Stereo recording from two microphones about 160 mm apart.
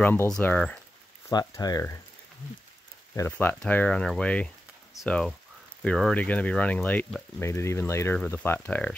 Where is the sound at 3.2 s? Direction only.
15° left (ahead or behind).